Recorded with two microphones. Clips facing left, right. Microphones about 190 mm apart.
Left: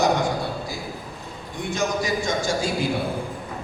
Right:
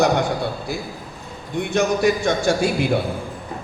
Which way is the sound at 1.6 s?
60° right (ahead or behind).